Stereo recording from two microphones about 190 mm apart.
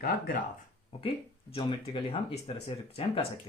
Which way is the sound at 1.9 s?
30° left (ahead or behind).